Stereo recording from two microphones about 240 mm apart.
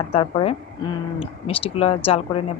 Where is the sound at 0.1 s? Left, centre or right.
Left.